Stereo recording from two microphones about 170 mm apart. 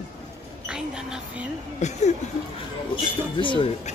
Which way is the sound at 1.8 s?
40° left (ahead or behind).